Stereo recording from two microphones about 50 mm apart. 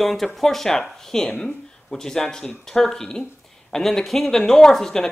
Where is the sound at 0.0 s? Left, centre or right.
Centre.